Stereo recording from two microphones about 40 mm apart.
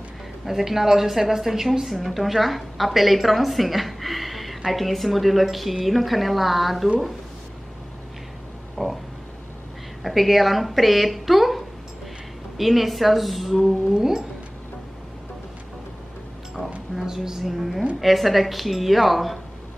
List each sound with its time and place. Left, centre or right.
0.5 s a woman's voice: centre
8.8 s a sound: centre
10.0 s a woman's voice: centre
13.9 s speech: centre
17.0 s a woman's voice: centre